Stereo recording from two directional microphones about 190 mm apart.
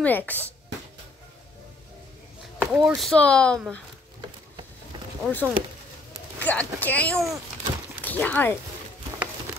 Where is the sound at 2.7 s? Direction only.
Centre (ahead or behind).